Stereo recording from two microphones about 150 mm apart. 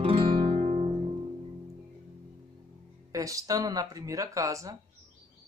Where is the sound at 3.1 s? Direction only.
25° right (ahead or behind).